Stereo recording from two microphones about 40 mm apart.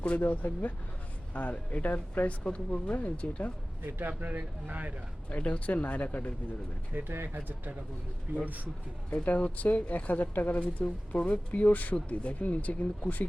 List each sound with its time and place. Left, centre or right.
0.2 s speech: left
1.3 s speech: left
3.8 s speech: right
4.2 s speech: right
5.3 s speech: left
6.9 s speech: right
7.3 s speech: right
9.2 s speech: left